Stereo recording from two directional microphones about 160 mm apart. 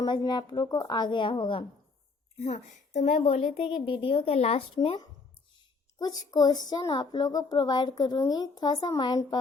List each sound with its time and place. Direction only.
0.0 s a woman's voice: 25° left (ahead or behind)
2.4 s a woman's voice: 45° left (ahead or behind); by 9.4 s 25° left (ahead or behind)